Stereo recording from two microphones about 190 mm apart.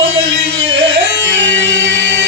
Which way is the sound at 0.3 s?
80° right.